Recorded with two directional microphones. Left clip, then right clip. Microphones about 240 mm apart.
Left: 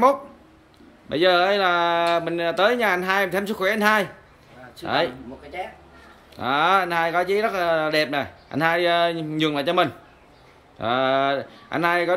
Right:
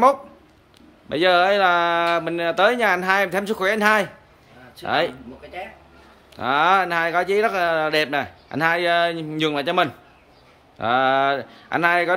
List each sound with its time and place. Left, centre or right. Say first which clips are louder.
1.0 s speech: right 1 dB; centre
6.3 s speech: right 2 dB; centre